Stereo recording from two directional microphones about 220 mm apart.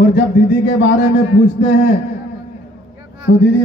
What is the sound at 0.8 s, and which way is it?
A man's voice, 55° left (ahead or behind).